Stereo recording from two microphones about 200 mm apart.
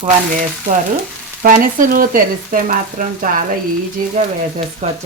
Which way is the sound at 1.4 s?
45° right (ahead or behind).